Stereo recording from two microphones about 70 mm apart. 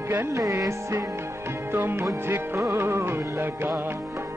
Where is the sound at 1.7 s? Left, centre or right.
Right.